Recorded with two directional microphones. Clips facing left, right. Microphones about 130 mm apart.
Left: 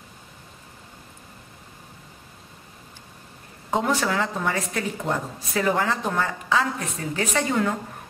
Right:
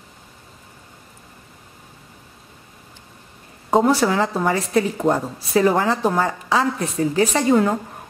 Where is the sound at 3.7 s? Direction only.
35° right (ahead or behind).